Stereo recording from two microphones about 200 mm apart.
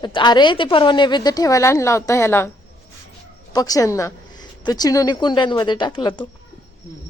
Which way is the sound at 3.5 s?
20° left (ahead or behind).